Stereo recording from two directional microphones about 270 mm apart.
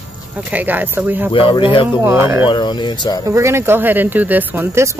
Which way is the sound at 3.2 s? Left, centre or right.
Centre.